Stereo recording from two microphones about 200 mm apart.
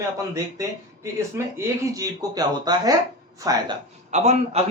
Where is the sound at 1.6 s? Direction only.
15° right (ahead or behind).